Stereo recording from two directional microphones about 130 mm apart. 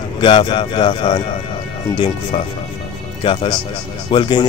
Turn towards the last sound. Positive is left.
turn(degrees=35)  # may be behind; listen again after turning